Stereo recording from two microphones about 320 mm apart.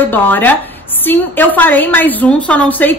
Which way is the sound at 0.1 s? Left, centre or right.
Centre.